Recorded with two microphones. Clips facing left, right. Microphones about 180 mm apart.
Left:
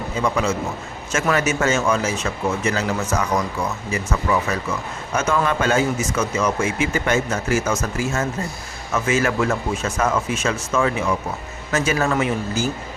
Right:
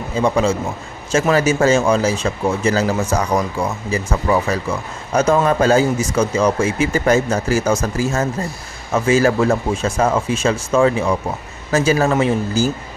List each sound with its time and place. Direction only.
0.2 s speech: 30° right (ahead or behind)